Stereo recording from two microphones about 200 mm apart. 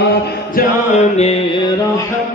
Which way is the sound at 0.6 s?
35° left (ahead or behind).